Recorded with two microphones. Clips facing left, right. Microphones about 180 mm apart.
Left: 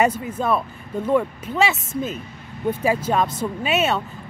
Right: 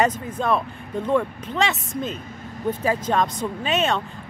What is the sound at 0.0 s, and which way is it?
Speech, 10° left (ahead or behind).